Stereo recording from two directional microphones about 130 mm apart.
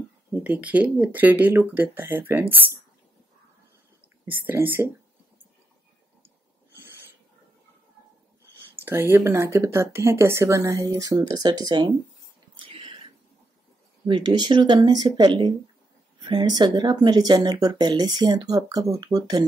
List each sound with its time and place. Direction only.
0.3 s speech: 15° right (ahead or behind)
4.3 s speech: 15° right (ahead or behind)
8.7 s speech: 15° right (ahead or behind); by 11.9 s 30° right (ahead or behind)
12.5 s whispering: 45° right (ahead or behind)
14.0 s speech: 35° right (ahead or behind)